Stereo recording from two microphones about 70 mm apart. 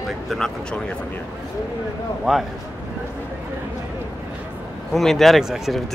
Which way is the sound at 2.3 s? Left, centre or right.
Centre.